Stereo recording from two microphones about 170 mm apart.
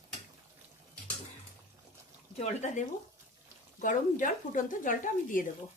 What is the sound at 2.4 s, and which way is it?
Speech, 45° left (ahead or behind).